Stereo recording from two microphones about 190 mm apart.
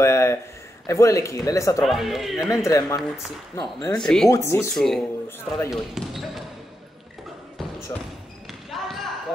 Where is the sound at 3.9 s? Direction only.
5° left (ahead or behind).